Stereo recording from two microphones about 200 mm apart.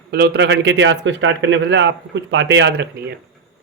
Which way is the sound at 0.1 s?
50° right (ahead or behind).